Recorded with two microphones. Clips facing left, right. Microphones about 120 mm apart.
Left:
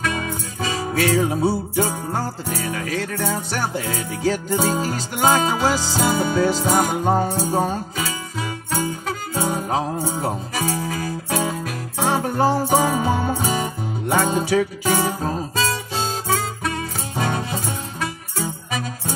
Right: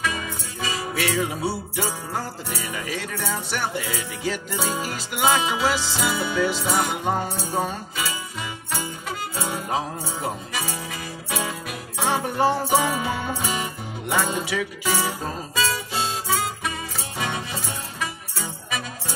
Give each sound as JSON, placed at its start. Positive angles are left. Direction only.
{"t": 0.1, "sound": "music", "side_deg": 45}
{"t": 2.7, "sound": "music", "side_deg": -10}
{"t": 3.2, "sound": "music", "side_deg": 45}
{"t": 10.9, "sound": "music", "side_deg": 40}
{"t": 17.2, "sound": "music", "side_deg": 40}